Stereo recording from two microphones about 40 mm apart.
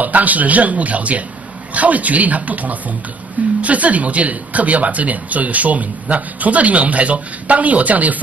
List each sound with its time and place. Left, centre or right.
0.0 s speech: right